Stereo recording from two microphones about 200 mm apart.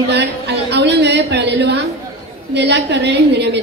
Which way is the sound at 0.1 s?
55° right (ahead or behind).